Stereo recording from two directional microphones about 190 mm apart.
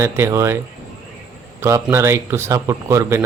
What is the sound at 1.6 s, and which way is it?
A man's voice, 15° right (ahead or behind).